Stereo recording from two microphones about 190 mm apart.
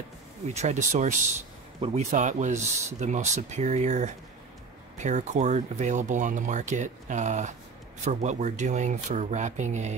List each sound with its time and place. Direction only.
0.6 s speech: 35° right (ahead or behind)